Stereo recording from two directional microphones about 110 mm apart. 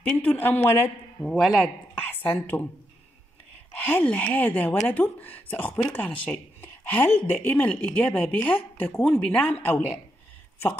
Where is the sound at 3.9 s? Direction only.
15° left (ahead or behind).